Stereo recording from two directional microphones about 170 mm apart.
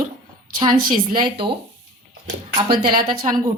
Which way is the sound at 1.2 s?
25° right (ahead or behind).